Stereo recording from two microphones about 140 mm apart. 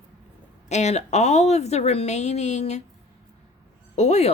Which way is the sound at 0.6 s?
55° left (ahead or behind).